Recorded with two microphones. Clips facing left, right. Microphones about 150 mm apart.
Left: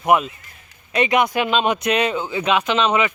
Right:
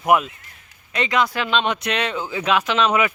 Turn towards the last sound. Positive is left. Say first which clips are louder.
# left 1 dB
turn(degrees=-5)  # may be behind; listen again after turning